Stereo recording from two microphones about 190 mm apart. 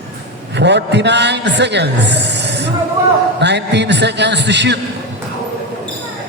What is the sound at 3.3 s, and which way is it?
A woman's voice, 65° right (ahead or behind).